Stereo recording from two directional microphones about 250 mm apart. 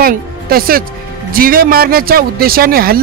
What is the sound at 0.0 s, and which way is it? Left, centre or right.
Speech, right.